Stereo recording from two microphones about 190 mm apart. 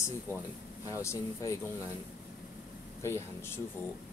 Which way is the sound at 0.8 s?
15° left (ahead or behind).